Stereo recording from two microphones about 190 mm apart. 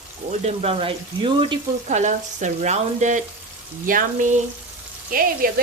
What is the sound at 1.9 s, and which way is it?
Frying, 40° right (ahead or behind).